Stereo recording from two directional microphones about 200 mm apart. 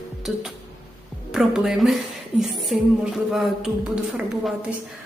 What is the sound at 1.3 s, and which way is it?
A woman's voice, 5° right (ahead or behind).